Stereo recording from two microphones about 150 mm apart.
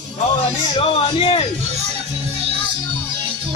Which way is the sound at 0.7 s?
35° left (ahead or behind).